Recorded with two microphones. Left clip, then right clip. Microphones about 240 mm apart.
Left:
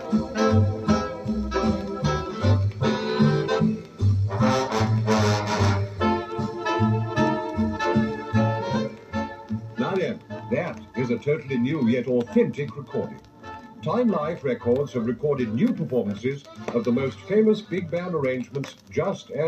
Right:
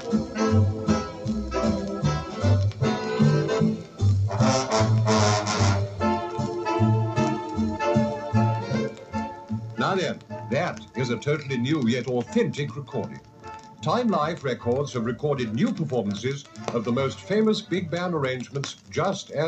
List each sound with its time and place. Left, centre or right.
0.3 s music: left
4.5 s music: centre
5.7 s music: left
9.8 s music: centre
11.2 s speech: centre
13.8 s speech: centre